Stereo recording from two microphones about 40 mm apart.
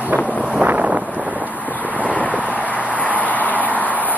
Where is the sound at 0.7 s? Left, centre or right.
Right.